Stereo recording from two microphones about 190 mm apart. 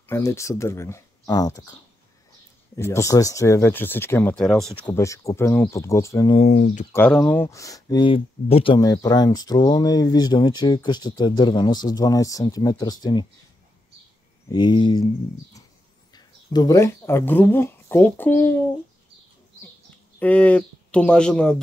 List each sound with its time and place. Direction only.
0.1 s speech: 15° left (ahead or behind)
4.8 s speech: 15° left (ahead or behind)
6.3 s speech: 35° left (ahead or behind)
6.9 s speech: 5° left (ahead or behind)
14.5 s speech: 25° left (ahead or behind)
16.1 s speech: 20° left (ahead or behind)
20.2 s speech: 10° left (ahead or behind)